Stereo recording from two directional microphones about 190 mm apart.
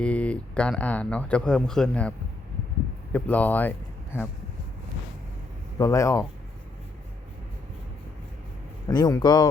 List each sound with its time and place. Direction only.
0.0 s speech: 5° left (ahead or behind)
5.8 s speech: 15° left (ahead or behind)
8.9 s speech: 20° left (ahead or behind)